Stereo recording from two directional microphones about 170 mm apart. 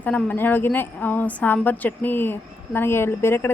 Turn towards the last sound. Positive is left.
turn(degrees=15)  # may be behind; listen again after turning